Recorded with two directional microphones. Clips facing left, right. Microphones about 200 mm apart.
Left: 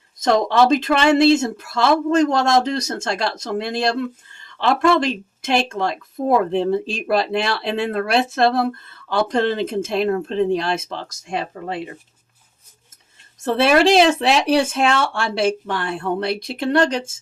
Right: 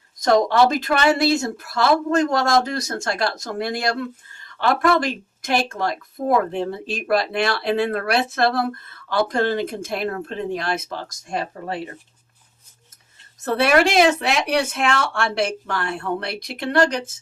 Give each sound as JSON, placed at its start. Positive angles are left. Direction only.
{"t": 0.5, "sound": "speech", "side_deg": 25}
{"t": 13.4, "sound": "speech", "side_deg": 25}